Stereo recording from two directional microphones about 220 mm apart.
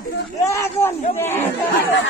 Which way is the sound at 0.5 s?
10° left (ahead or behind).